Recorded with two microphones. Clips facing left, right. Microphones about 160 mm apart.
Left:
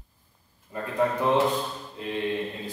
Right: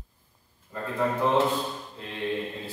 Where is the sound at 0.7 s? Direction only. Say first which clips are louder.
Left 1 dB; 15° left (ahead or behind).